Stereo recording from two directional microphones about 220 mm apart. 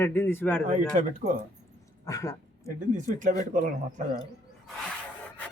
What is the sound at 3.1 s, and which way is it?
Speech, 35° right (ahead or behind).